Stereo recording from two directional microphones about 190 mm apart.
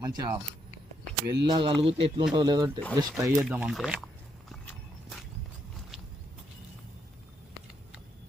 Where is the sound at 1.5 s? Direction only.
25° right (ahead or behind).